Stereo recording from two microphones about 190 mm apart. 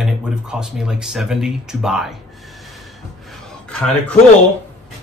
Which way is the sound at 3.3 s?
5° left (ahead or behind).